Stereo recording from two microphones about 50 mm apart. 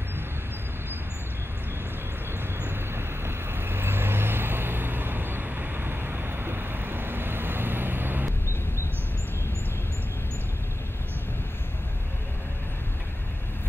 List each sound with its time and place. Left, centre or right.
2.6 s vehicle: right